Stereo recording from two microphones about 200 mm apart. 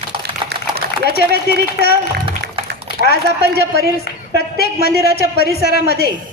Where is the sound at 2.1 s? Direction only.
55° right (ahead or behind).